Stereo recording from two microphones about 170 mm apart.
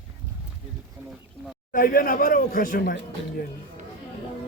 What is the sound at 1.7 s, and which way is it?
Speech, 55° left (ahead or behind).